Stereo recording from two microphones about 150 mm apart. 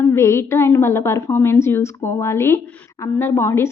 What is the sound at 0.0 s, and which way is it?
A woman's voice, 20° left (ahead or behind).